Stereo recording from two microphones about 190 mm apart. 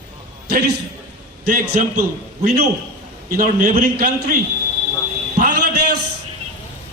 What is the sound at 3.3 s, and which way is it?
Speech, 45° right (ahead or behind).